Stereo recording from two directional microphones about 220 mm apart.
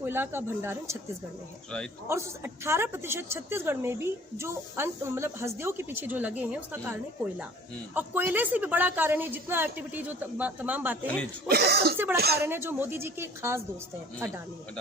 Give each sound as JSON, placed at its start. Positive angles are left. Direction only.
{"t": 0.0, "sound": "a woman's voice", "side_deg": -10}
{"t": 2.0, "sound": "a woman's voice", "side_deg": -10}
{"t": 7.9, "sound": "a woman's voice", "side_deg": -10}
{"t": 11.4, "sound": "speech", "side_deg": -45}
{"t": 12.4, "sound": "a woman's voice", "side_deg": -10}